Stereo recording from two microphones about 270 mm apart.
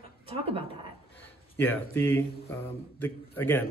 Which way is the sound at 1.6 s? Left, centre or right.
Centre.